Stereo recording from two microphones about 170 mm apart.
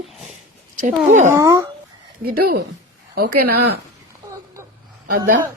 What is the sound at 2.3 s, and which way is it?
Speech, 65° right (ahead or behind).